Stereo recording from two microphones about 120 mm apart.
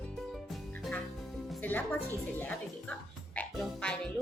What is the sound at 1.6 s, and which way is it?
Music, 15° left (ahead or behind).